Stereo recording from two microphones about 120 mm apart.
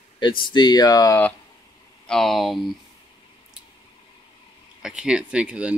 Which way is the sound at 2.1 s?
5° left (ahead or behind).